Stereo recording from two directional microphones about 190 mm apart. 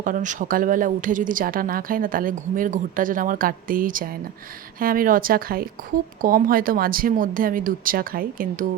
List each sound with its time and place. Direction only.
0.0 s speech: 45° right (ahead or behind)